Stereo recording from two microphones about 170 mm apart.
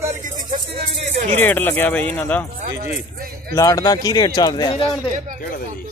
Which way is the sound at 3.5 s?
20° left (ahead or behind).